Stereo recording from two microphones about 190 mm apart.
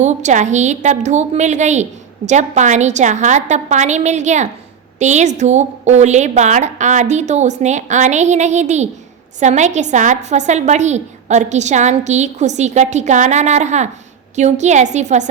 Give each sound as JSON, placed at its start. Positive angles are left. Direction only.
{"t": 0.0, "sound": "a woman's voice", "side_deg": -40}